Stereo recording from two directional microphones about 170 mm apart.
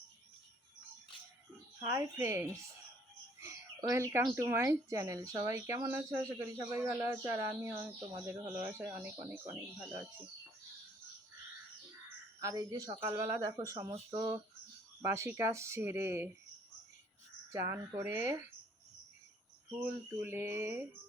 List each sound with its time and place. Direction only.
1.8 s speech: 15° right (ahead or behind)
3.4 s a sound: 15° right (ahead or behind)
4.4 s speech: 15° right (ahead or behind)
12.4 s speech: 20° right (ahead or behind)
17.7 s speech: 15° right (ahead or behind)
19.8 s speech: 10° right (ahead or behind)